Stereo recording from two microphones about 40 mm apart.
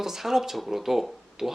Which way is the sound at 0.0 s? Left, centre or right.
Centre.